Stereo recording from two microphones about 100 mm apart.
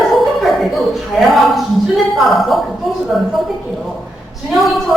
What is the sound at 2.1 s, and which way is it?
Speech, centre (ahead or behind).